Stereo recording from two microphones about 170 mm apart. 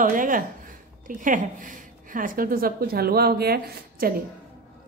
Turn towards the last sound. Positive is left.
turn(degrees=-65)  # may be behind; listen again after turning